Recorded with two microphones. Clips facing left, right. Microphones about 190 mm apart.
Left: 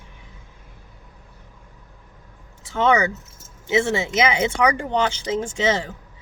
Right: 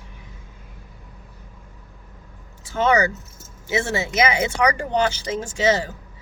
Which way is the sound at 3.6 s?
25° left (ahead or behind).